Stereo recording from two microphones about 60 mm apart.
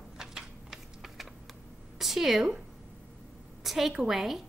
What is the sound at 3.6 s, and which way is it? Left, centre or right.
Speech, centre.